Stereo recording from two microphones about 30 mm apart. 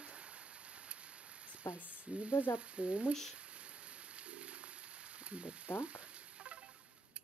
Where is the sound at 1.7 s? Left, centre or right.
Right.